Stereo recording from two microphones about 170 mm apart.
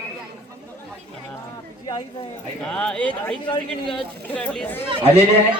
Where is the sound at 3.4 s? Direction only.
30° left (ahead or behind).